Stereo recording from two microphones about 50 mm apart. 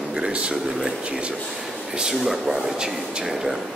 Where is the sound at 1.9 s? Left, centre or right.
Centre.